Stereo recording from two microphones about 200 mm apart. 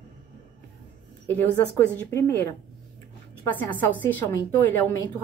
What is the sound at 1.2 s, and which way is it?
A woman's voice, 10° left (ahead or behind).